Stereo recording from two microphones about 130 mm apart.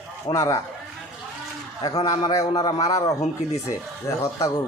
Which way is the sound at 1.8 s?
30° left (ahead or behind).